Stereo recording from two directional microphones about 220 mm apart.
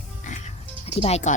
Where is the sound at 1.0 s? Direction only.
30° left (ahead or behind).